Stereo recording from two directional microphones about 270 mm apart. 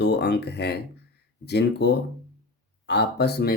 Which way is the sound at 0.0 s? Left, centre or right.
Left.